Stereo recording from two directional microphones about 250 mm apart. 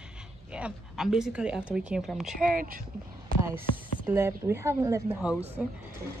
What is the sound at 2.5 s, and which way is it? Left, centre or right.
Speech, right.